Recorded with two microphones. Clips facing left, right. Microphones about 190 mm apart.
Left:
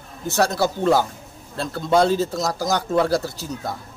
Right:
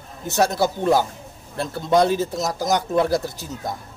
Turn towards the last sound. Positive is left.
turn(degrees=-20)  # may be behind; listen again after turning